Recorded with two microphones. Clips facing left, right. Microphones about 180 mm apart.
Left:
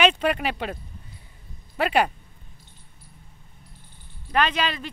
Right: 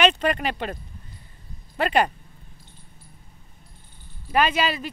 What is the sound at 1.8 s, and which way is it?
Speech, 5° left (ahead or behind).